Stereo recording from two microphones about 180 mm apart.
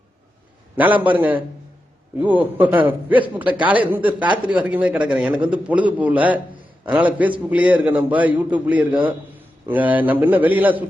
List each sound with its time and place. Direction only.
1.0 s a man's voice: 10° right (ahead or behind)